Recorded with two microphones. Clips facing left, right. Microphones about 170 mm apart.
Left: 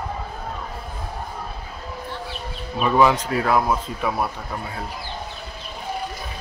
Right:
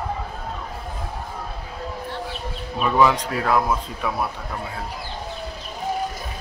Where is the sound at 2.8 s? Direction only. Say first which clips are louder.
Left 1 dB; 5° left (ahead or behind).